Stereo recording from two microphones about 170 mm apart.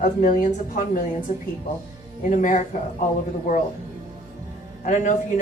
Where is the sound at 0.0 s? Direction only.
45° left (ahead or behind).